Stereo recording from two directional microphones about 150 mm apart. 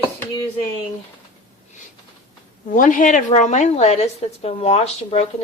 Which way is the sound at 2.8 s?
60° left (ahead or behind).